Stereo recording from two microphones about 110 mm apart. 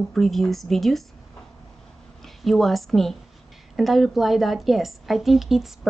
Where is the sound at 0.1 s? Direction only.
Centre (ahead or behind).